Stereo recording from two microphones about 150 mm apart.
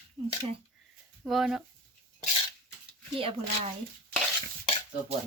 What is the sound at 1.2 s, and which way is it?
Speech, centre (ahead or behind).